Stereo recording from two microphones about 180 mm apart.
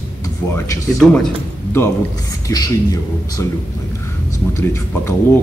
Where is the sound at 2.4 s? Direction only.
20° left (ahead or behind).